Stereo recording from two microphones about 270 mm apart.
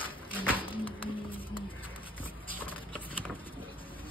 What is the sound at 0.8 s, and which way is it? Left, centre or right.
Music, centre.